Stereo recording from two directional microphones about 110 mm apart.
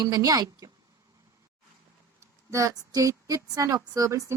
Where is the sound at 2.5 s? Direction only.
30° right (ahead or behind).